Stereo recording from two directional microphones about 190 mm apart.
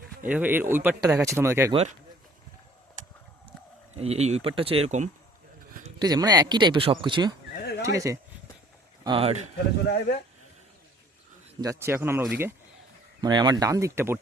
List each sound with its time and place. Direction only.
0.3 s speech: 10° right (ahead or behind)
1.7 s speech: 35° right (ahead or behind)
3.9 s speech: 35° right (ahead or behind)
6.0 s speech: 20° right (ahead or behind)
9.0 s speech: 30° right (ahead or behind)
9.8 s speech: 60° left (ahead or behind)
11.6 s speech: 15° right (ahead or behind)
13.2 s speech: 20° right (ahead or behind)